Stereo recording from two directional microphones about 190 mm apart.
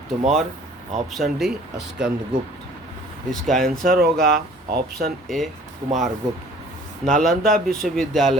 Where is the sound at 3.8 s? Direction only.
50° right (ahead or behind).